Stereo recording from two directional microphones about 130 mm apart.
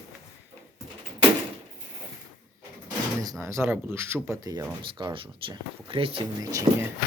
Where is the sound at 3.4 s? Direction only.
20° right (ahead or behind); by 6.2 s 45° right (ahead or behind).